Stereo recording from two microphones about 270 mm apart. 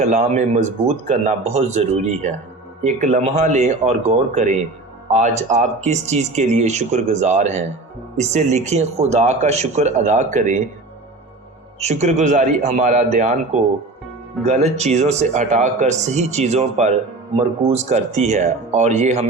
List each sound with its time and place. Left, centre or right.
0.0 s speech: right
11.8 s speech: right
14.4 s speech: right